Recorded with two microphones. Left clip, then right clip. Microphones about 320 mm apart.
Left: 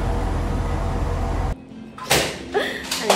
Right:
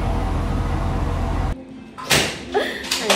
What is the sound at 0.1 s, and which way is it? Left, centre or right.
Music, left.